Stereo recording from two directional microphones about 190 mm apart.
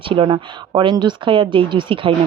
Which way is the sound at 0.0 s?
25° right (ahead or behind).